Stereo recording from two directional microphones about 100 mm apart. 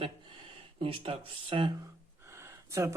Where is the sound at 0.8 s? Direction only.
65° right (ahead or behind).